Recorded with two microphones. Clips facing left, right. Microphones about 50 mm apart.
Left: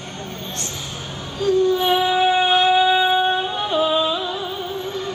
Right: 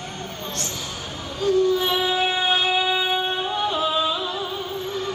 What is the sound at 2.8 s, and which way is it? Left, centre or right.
Music, left.